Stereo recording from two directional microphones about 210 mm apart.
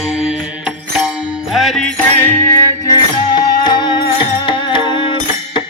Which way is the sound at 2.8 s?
20° left (ahead or behind).